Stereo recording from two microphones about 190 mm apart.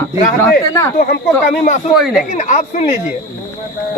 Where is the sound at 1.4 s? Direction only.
45° left (ahead or behind).